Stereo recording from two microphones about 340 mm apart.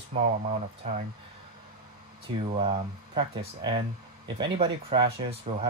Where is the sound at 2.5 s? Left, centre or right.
Centre.